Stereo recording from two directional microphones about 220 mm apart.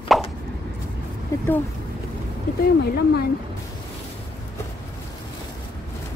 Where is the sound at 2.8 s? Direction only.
45° left (ahead or behind).